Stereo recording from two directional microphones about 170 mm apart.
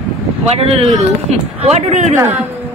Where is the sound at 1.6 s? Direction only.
40° right (ahead or behind).